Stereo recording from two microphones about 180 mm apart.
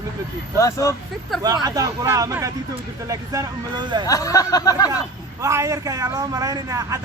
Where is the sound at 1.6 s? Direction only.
20° right (ahead or behind).